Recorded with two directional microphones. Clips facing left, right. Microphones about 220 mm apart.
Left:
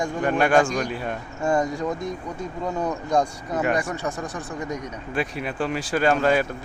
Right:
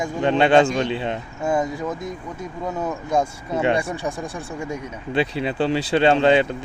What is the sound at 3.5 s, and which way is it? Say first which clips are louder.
Speech: right 6 dB; 25° right (ahead or behind).